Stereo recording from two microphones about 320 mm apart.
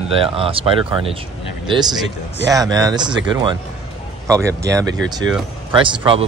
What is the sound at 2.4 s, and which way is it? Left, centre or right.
Speech, centre.